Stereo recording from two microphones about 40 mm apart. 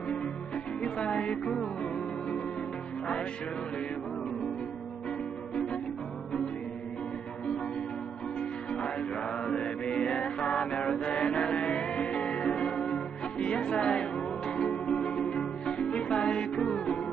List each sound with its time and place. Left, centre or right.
0.7 s music: left
8.4 s music: left